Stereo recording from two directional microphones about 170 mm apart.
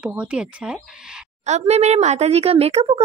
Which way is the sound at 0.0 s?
5° right (ahead or behind).